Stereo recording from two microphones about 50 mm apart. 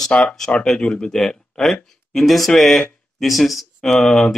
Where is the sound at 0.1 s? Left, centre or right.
Left.